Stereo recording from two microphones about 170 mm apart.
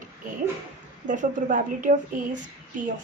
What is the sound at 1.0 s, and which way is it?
A woman's voice, 50° right (ahead or behind).